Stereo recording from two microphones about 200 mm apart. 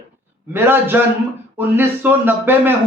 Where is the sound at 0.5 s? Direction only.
10° right (ahead or behind).